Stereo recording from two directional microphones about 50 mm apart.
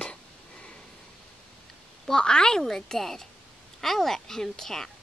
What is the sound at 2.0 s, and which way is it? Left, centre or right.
A woman's voice, centre.